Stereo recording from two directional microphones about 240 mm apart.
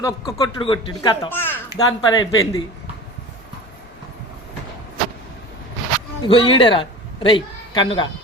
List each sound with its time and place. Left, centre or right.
0.0 s speech: centre
6.2 s a man's voice: left